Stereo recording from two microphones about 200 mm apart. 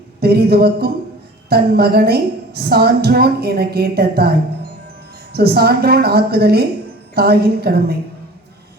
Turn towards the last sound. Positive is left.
turn(degrees=-50)  # may be behind; listen again after turning